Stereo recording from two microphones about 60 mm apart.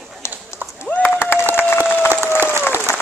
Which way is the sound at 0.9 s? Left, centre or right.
Left.